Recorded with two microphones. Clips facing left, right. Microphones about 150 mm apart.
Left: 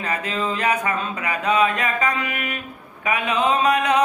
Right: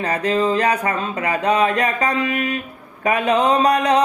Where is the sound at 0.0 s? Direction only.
35° right (ahead or behind).